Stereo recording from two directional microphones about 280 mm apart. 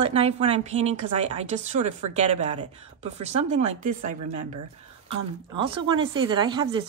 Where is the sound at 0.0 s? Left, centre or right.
Right.